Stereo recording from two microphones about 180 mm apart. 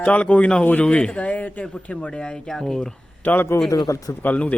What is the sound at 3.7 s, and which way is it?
Speech, 20° left (ahead or behind).